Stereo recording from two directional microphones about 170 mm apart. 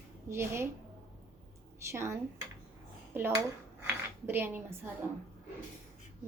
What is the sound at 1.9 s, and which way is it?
Speech, 15° right (ahead or behind).